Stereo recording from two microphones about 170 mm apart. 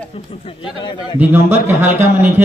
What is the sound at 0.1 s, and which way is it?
A man's voice, 35° left (ahead or behind).